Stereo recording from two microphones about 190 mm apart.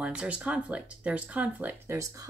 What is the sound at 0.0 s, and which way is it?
Speech, 5° right (ahead or behind).